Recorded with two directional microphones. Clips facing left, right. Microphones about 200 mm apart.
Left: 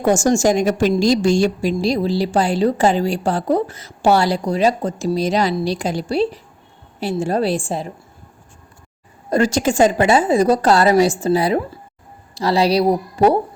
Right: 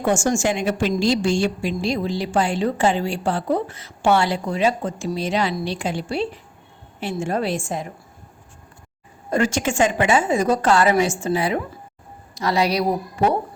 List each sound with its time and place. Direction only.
0.0 s a woman's voice: 40° left (ahead or behind)
9.3 s a woman's voice: 35° left (ahead or behind)